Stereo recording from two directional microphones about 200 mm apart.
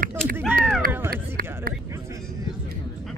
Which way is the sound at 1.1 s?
50° right (ahead or behind).